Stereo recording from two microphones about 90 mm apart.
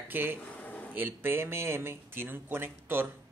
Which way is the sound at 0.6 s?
15° left (ahead or behind).